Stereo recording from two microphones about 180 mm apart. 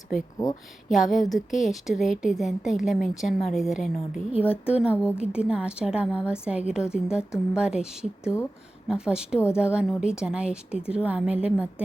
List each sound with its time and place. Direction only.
0.9 s a woman's voice: centre (ahead or behind)